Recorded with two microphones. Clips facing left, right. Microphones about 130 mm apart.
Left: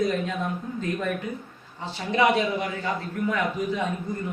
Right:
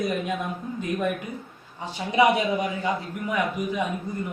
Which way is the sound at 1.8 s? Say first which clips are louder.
Right 2 dB; 15° right (ahead or behind).